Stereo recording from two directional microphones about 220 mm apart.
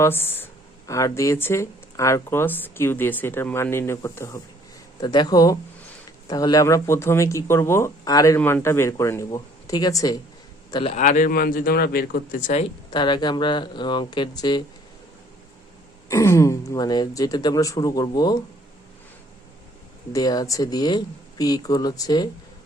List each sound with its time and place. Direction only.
0.0 s a man's voice: 10° left (ahead or behind)
10.9 s a man's voice: 35° left (ahead or behind)
12.9 s speech: 20° left (ahead or behind)
16.0 s speech: 15° left (ahead or behind)
20.1 s speech: 15° left (ahead or behind)